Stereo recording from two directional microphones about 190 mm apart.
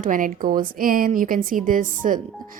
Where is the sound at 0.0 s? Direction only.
45° right (ahead or behind).